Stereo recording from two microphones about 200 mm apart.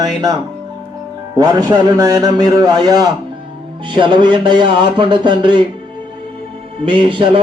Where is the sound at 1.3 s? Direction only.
20° right (ahead or behind).